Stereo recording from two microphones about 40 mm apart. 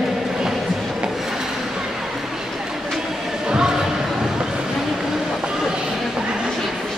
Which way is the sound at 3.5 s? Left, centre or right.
Centre.